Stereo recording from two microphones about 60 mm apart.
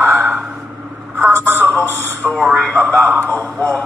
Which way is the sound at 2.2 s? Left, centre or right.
Centre.